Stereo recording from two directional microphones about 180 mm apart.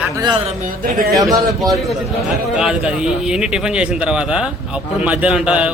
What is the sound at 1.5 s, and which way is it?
A man's voice, centre (ahead or behind).